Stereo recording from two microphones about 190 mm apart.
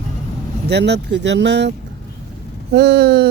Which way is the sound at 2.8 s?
60° right (ahead or behind).